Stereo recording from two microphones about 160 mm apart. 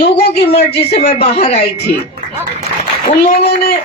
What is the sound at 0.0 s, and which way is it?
A woman's voice, 40° left (ahead or behind).